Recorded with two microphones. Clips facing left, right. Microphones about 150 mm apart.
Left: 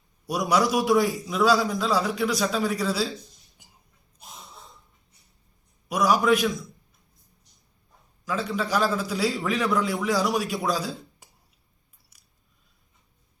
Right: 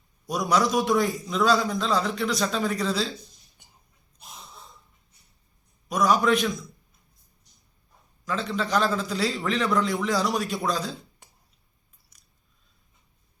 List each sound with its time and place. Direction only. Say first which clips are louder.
0.3 s a man's voice: left 1 dB; 10° left (ahead or behind)
5.9 s a man's voice: left 1 dB; 5° left (ahead or behind)
8.2 s a man's voice: left 1 dB; 5° left (ahead or behind)
12.1 s scissors: even; 10° left (ahead or behind)